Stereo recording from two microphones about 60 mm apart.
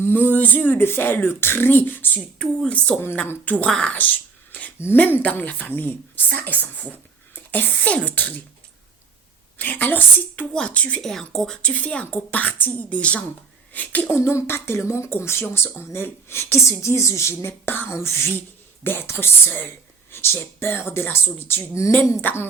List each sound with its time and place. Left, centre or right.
0.0 s speech: left
2.6 s a woman's voice: left
4.9 s speech: left
9.6 s speech: left
11.0 s a woman's voice: centre
11.6 s speech: left
14.1 s speech: left
18.3 s speech: left